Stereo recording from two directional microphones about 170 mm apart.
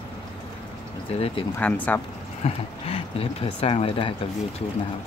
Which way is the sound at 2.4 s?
35° left (ahead or behind).